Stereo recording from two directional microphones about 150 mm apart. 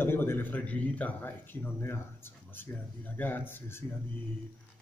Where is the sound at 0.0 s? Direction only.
15° left (ahead or behind).